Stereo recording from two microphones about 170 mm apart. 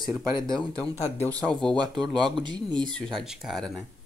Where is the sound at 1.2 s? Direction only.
20° right (ahead or behind).